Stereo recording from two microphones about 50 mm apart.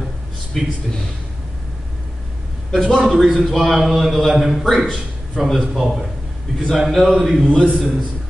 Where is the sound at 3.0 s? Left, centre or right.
Centre.